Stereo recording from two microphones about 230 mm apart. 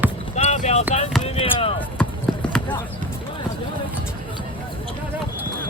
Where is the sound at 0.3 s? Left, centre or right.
Left.